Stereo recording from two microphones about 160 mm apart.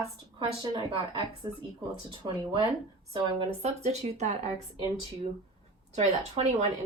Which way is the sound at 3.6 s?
40° right (ahead or behind).